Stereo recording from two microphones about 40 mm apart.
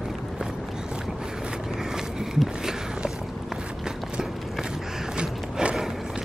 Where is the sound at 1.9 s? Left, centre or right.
Centre.